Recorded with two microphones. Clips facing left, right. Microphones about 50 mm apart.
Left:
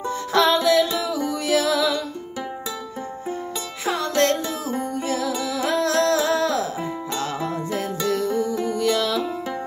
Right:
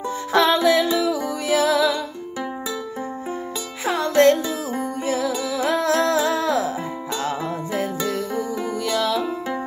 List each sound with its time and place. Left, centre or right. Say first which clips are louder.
0.3 s music: right 1 dB; centre
3.8 s music: right 5 dB; centre